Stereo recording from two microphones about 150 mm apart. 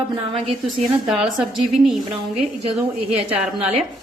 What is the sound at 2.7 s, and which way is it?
A woman's voice, 40° right (ahead or behind).